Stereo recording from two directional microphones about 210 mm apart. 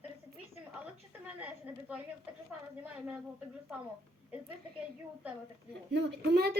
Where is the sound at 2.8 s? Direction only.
5° right (ahead or behind).